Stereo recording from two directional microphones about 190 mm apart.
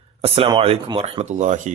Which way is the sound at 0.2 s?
25° right (ahead or behind).